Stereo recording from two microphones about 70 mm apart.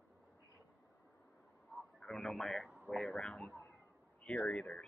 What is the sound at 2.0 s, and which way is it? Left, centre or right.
Speech, centre.